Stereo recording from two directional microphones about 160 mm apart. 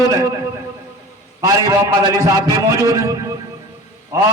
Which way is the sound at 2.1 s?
20° right (ahead or behind).